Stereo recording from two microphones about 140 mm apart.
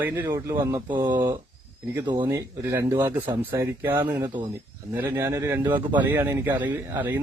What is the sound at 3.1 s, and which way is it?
Speech, 30° right (ahead or behind).